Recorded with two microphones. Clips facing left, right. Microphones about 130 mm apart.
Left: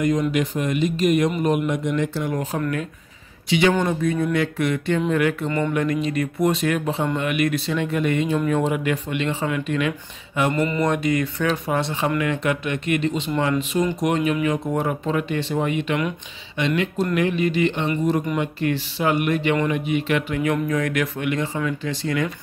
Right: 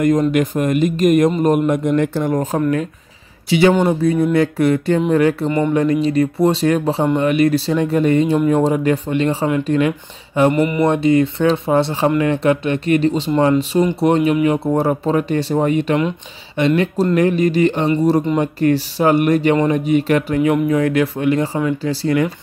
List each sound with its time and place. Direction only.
0.3 s speech: 50° right (ahead or behind); by 10.5 s 30° right (ahead or behind)
10.5 s mantra: 20° right (ahead or behind)
10.9 s speech: 30° right (ahead or behind)
20.3 s speech: 25° right (ahead or behind)